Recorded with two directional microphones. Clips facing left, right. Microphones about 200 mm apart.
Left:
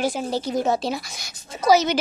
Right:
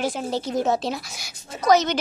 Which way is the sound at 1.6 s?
5° left (ahead or behind).